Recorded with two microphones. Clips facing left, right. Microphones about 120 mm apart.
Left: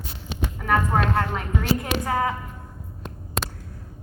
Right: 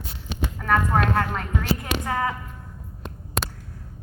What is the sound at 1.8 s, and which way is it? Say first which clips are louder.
Speech: left 2 dB; 30° left (ahead or behind).